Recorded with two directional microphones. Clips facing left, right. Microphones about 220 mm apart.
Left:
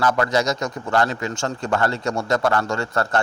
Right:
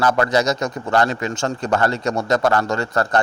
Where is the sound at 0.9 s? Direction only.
20° right (ahead or behind).